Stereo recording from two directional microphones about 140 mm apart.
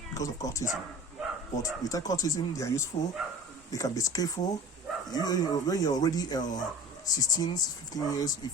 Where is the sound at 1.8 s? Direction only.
25° left (ahead or behind).